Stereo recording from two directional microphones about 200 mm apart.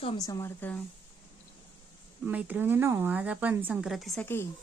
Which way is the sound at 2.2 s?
5° right (ahead or behind).